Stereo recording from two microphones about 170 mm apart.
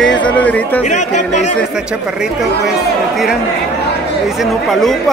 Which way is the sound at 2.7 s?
Centre (ahead or behind).